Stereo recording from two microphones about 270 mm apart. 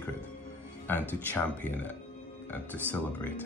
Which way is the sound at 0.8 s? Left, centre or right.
Centre.